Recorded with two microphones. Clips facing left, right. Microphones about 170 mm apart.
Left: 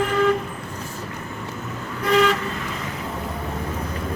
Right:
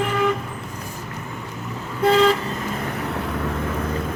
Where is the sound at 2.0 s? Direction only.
25° right (ahead or behind).